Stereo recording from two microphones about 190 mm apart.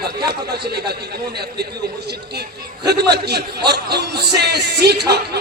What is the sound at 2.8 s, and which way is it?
A man's voice, 60° right (ahead or behind).